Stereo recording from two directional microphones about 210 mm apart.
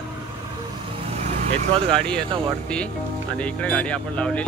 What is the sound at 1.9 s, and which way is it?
Speech, 5° left (ahead or behind).